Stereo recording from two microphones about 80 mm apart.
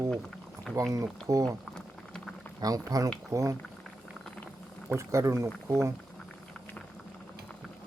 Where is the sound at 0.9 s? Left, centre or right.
Right.